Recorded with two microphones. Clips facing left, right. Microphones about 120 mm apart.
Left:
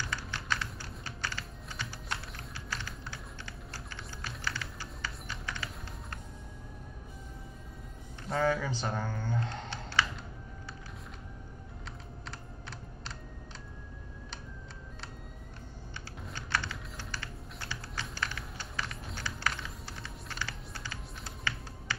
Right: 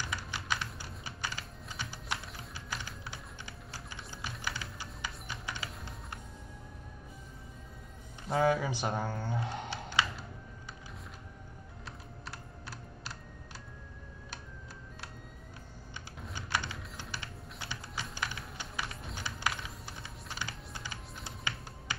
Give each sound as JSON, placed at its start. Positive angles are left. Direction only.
{"t": 0.1, "sound": "typing", "side_deg": -15}
{"t": 8.3, "sound": "speech", "side_deg": -10}
{"t": 9.2, "sound": "a sound", "side_deg": -10}
{"t": 12.3, "sound": "computer keyboard", "side_deg": -5}
{"t": 16.3, "sound": "typing", "side_deg": -15}
{"t": 18.1, "sound": "music", "side_deg": -15}
{"t": 20.2, "sound": "music", "side_deg": -15}